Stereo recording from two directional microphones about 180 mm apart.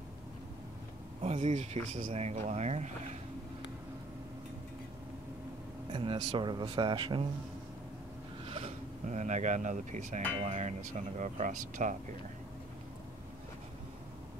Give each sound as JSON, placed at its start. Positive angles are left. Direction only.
{"t": 1.2, "sound": "speech", "side_deg": -40}
{"t": 5.9, "sound": "speech", "side_deg": -30}
{"t": 8.5, "sound": "speech", "side_deg": -35}